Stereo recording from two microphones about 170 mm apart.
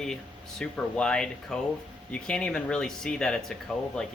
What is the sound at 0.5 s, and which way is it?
Speech, 5° left (ahead or behind).